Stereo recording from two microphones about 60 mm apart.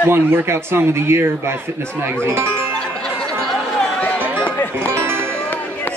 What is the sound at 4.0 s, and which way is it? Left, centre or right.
Music, left.